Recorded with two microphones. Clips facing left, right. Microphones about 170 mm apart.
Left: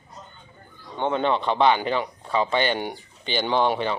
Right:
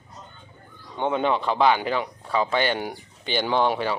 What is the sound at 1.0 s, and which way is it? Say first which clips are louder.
Speech: even; 10° right (ahead or behind).